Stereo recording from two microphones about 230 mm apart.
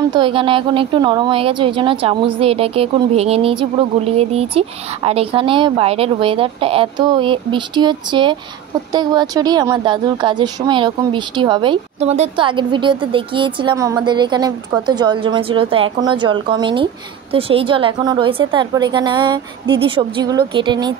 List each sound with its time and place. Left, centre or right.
0.1 s speech: right